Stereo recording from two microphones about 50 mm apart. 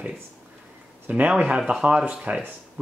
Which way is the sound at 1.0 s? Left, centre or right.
Right.